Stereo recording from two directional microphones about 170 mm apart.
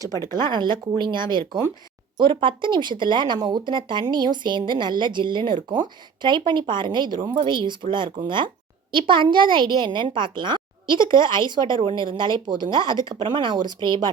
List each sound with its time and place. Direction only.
0.1 s speech: 15° left (ahead or behind)
0.4 s speech: 25° right (ahead or behind)